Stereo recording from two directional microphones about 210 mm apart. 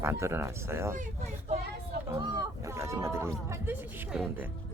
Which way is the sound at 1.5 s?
30° right (ahead or behind).